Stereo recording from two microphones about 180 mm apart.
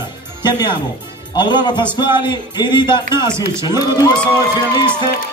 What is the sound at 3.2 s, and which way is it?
Speech, 15° right (ahead or behind).